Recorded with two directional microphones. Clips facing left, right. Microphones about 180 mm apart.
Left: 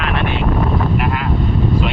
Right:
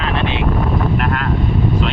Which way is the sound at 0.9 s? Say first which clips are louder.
Even; 5° left (ahead or behind).